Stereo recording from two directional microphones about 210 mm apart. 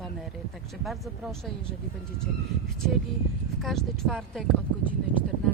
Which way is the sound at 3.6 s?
Centre (ahead or behind).